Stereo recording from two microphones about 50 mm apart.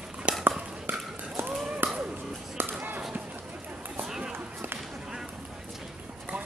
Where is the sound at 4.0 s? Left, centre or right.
Centre.